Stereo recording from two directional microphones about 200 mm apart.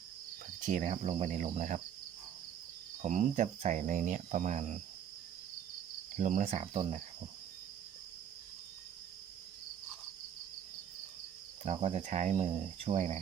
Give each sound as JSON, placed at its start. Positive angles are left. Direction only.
{"t": 0.6, "sound": "speech", "side_deg": -40}
{"t": 3.0, "sound": "speech", "side_deg": -35}
{"t": 6.1, "sound": "speech", "side_deg": -40}
{"t": 11.6, "sound": "speech", "side_deg": -30}